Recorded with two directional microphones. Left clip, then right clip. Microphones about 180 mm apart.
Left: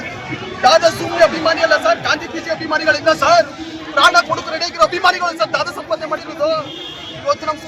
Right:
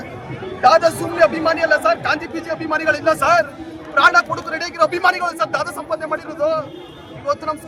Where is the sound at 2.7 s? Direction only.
25° right (ahead or behind).